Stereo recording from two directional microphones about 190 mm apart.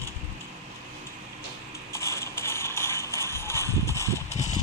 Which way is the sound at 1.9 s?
15° left (ahead or behind).